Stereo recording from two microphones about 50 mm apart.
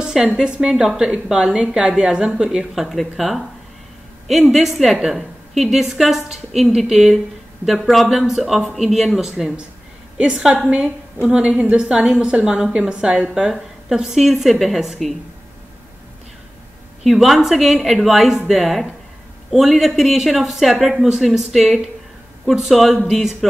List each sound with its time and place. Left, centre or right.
0.4 s speech: centre
10.1 s a woman's voice: centre
17.0 s speech: centre